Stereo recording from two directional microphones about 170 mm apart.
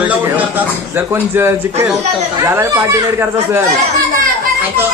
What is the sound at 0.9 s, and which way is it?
Speech, 15° right (ahead or behind).